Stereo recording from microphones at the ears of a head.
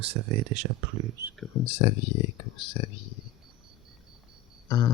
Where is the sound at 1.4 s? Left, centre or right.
Left.